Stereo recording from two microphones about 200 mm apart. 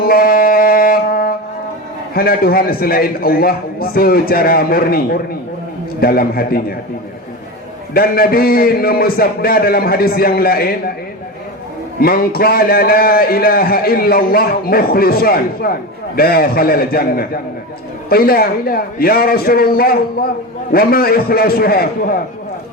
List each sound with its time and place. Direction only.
0.0 s music: 50° left (ahead or behind)
2.1 s a man's voice: 50° left (ahead or behind)
7.9 s a man's voice: 50° left (ahead or behind)
11.9 s a man's voice: 50° left (ahead or behind)